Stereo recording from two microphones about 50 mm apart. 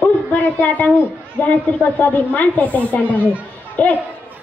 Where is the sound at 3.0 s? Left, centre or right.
Right.